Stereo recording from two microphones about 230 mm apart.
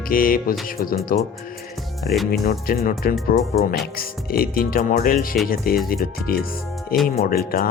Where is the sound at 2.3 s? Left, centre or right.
Left.